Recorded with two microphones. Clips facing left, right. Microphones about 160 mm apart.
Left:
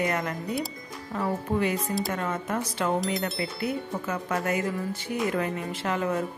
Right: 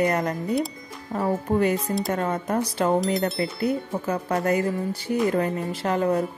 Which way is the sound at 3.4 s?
35° right (ahead or behind).